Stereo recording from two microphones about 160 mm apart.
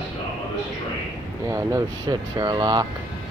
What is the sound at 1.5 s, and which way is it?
Speech, 20° right (ahead or behind).